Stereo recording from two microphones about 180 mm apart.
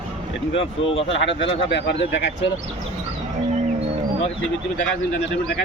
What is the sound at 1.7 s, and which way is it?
Speech, 75° left (ahead or behind).